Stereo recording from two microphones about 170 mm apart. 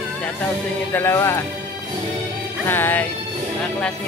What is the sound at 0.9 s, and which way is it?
Speech, 15° left (ahead or behind).